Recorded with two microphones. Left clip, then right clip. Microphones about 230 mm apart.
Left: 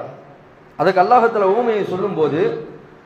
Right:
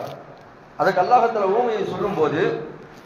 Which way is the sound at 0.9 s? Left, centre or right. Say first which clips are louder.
Left 4 dB; left.